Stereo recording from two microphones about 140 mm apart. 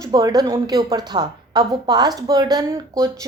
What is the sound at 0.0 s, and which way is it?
Speech, 25° right (ahead or behind).